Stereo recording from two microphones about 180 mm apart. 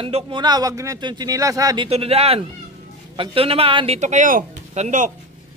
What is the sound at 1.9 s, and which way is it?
Speech, 35° right (ahead or behind).